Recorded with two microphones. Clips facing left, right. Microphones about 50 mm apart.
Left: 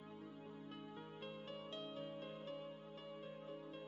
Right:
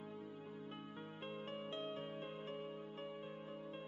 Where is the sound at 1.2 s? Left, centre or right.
Right.